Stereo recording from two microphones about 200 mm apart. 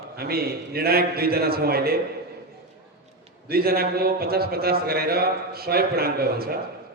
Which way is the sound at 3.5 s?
50° right (ahead or behind).